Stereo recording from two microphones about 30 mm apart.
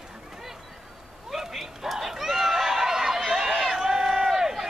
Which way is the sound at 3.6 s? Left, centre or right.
Centre.